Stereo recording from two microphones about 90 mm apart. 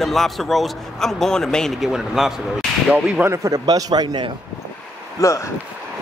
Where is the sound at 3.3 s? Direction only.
40° right (ahead or behind).